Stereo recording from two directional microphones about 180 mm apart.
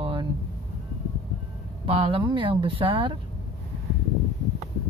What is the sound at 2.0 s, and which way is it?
Speech, 25° right (ahead or behind).